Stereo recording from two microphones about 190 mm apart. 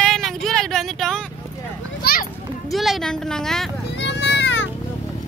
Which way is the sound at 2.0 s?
50° left (ahead or behind).